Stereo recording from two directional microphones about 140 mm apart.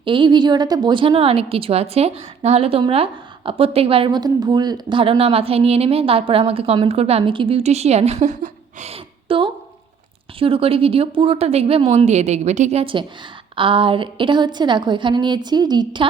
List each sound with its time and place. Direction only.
0.0 s a woman's voice: 35° right (ahead or behind); by 8.4 s 55° right (ahead or behind)
8.8 s a sound: 45° right (ahead or behind)
10.4 s a woman's voice: 40° right (ahead or behind)
12.8 s a woman's voice: 35° right (ahead or behind)